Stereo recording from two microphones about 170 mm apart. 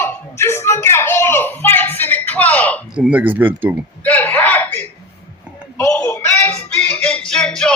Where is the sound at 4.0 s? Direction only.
10° left (ahead or behind).